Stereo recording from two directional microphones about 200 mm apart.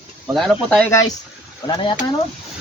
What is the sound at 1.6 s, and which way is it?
Speech, 20° left (ahead or behind).